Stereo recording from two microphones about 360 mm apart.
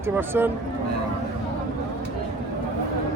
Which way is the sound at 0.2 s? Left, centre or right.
Centre.